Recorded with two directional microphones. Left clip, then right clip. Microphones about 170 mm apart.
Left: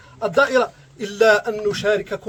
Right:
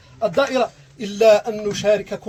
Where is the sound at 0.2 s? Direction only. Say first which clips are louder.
Left 1 dB; 15° left (ahead or behind).